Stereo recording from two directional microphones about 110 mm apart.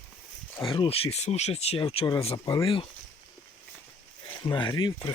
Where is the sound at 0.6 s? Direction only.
55° left (ahead or behind); by 1.8 s 70° left (ahead or behind).